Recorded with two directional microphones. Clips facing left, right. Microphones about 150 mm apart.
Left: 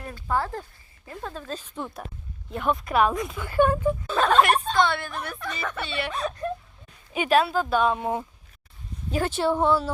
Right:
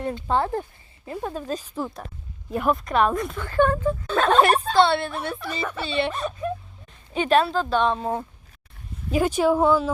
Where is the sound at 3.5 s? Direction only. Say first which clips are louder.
Even; 10° left (ahead or behind).